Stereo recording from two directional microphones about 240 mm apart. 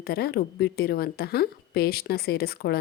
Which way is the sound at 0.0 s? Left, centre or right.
Left.